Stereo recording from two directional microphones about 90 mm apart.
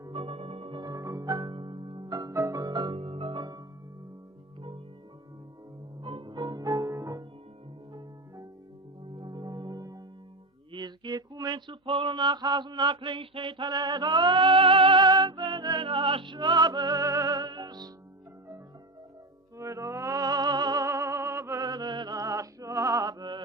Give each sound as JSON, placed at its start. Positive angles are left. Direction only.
{"t": 0.1, "sound": "singing bowl", "side_deg": -90}
{"t": 0.8, "sound": "music", "side_deg": -40}
{"t": 1.5, "sound": "music", "side_deg": -65}
{"t": 2.0, "sound": "music", "side_deg": -45}
{"t": 2.3, "sound": "music", "side_deg": -30}
{"t": 2.6, "sound": "music", "side_deg": -55}
{"t": 6.0, "sound": "music", "side_deg": -70}
{"t": 9.1, "sound": "music", "side_deg": -55}
{"t": 10.7, "sound": "a sound", "side_deg": -55}
{"t": 19.5, "sound": "music", "side_deg": -35}
{"t": 20.8, "sound": "music", "side_deg": -35}
{"t": 21.6, "sound": "music", "side_deg": -45}